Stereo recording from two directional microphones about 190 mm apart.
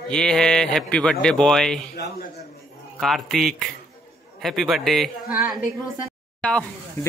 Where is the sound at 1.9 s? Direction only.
55° left (ahead or behind).